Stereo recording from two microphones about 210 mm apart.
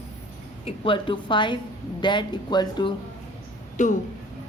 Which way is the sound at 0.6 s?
25° left (ahead or behind).